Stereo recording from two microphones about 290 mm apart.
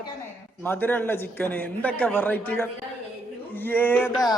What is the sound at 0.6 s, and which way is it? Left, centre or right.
A man's voice, centre.